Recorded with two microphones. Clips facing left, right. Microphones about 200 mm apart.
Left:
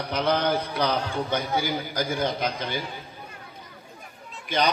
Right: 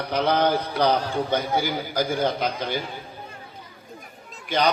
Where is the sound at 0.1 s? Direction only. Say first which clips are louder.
Right 3 dB; 55° right (ahead or behind).